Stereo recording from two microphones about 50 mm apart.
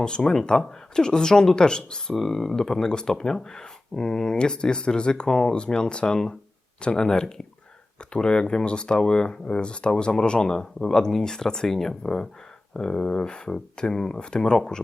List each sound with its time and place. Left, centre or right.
0.0 s speech: centre